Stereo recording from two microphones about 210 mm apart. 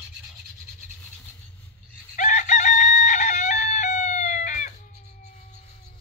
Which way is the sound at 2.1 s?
35° left (ahead or behind).